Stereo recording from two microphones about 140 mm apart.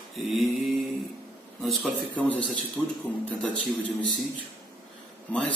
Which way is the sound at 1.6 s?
Centre (ahead or behind).